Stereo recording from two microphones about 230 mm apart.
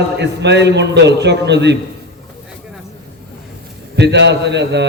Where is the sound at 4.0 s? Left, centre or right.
Right.